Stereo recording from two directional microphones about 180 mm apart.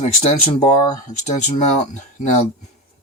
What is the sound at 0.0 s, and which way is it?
Speech, 35° left (ahead or behind).